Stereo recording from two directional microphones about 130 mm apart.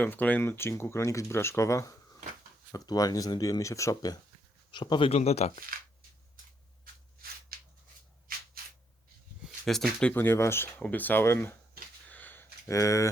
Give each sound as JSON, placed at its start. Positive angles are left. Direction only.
{"t": 0.0, "sound": "speech", "side_deg": 15}
{"t": 9.6, "sound": "speech", "side_deg": 5}
{"t": 12.0, "sound": "a sound", "side_deg": 15}